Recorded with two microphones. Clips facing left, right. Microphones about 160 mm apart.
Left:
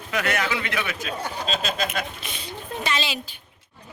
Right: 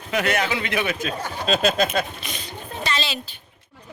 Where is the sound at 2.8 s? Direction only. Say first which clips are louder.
Right 1 dB; 10° left (ahead or behind).